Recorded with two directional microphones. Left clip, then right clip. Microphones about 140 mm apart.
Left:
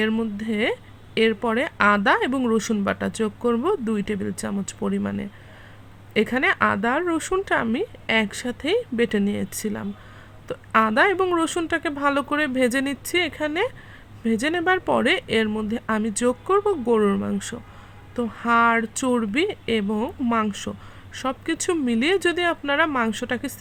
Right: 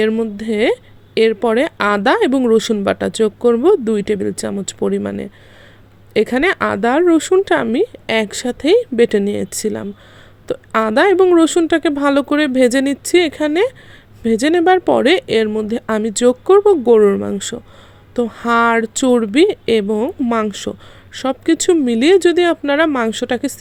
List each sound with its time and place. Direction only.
0.1 s speech: 25° right (ahead or behind)
0.4 s speech: 35° right (ahead or behind)
20.0 s speech: 20° right (ahead or behind)
20.3 s speech: 35° right (ahead or behind)